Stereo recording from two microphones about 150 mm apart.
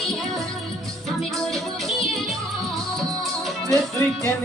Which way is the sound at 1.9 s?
Centre (ahead or behind).